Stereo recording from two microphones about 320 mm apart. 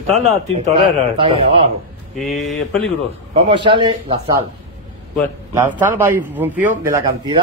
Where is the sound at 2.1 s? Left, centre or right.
Centre.